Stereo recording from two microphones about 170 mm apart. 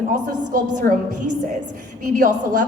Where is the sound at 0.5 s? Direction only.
55° right (ahead or behind).